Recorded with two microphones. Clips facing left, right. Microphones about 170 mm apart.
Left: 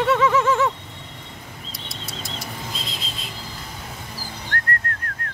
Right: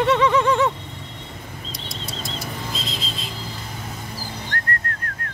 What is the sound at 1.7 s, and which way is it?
Bird flight, centre (ahead or behind).